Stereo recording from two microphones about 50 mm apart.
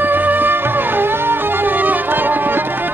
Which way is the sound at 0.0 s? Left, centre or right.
Right.